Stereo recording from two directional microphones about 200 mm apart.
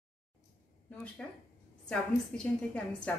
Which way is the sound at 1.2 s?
5° left (ahead or behind).